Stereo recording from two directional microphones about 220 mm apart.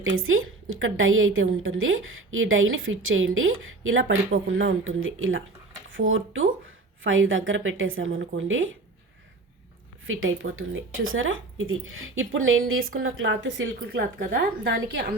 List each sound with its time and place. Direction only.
0.0 s a woman's voice: 65° right (ahead or behind)
10.1 s a woman's voice: 65° right (ahead or behind)